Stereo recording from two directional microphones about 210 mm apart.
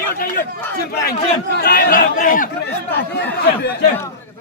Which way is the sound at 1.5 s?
50° left (ahead or behind).